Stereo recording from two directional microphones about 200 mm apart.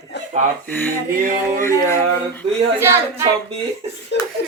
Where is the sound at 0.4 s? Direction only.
35° right (ahead or behind).